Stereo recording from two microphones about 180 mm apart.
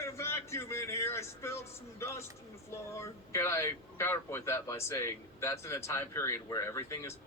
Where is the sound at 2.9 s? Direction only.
15° left (ahead or behind).